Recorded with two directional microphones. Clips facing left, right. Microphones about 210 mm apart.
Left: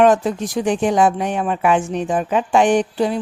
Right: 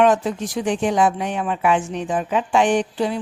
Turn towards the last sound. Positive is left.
turn(degrees=45)  # may be behind; listen again after turning